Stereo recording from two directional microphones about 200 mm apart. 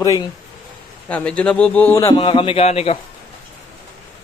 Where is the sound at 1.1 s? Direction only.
5° left (ahead or behind); by 3.0 s 30° left (ahead or behind).